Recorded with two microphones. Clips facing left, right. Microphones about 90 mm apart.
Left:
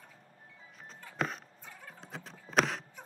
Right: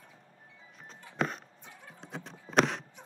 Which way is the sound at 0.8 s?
Centre (ahead or behind).